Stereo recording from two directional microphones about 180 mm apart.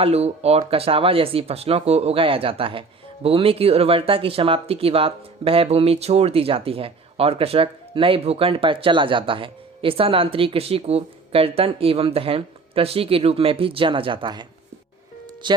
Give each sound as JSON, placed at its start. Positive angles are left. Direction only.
{"t": 0.0, "sound": "speech", "side_deg": -35}
{"t": 15.4, "sound": "speech", "side_deg": -25}